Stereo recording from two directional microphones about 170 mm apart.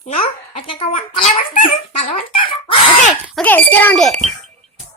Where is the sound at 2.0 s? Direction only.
35° left (ahead or behind).